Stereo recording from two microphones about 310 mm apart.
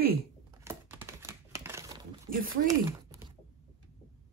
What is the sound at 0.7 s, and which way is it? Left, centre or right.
Crumpling, centre.